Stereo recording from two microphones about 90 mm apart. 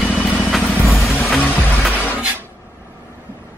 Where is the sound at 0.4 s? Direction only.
Centre (ahead or behind).